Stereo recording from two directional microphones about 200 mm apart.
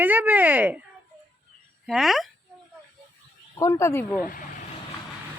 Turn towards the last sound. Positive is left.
turn(degrees=15)  # may be behind; listen again after turning